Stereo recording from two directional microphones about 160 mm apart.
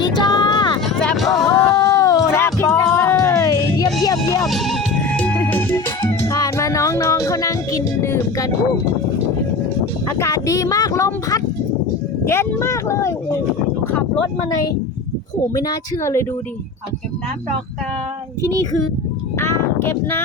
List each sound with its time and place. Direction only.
0.0 s vehicle: 25° left (ahead or behind)
0.9 s a sound: centre (ahead or behind)
1.5 s a sound: 20° left (ahead or behind)
2.6 s music: 10° left (ahead or behind)
4.4 s music: centre (ahead or behind); by 8.4 s 20° left (ahead or behind)
10.1 s speech: 20° left (ahead or behind)
15.5 s speech: 25° left (ahead or behind)
19.4 s speech: 15° left (ahead or behind)